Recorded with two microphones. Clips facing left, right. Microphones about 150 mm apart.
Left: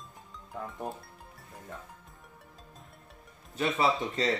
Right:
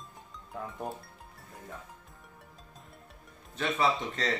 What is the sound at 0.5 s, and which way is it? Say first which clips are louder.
Speech: even; centre (ahead or behind).